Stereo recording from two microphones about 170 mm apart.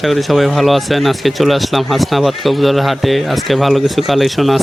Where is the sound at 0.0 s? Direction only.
Centre (ahead or behind).